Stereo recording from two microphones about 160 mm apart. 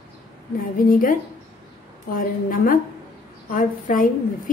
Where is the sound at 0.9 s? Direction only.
60° left (ahead or behind).